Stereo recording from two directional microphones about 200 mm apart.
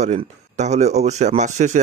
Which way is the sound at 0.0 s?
35° right (ahead or behind).